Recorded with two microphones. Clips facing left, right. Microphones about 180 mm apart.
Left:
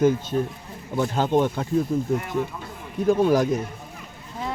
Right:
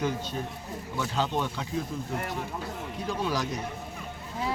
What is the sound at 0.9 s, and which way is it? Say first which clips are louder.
Speech: left 8 dB; 50° left (ahead or behind).